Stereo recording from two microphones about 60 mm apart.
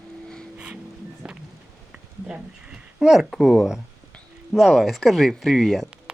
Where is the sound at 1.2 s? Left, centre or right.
Centre.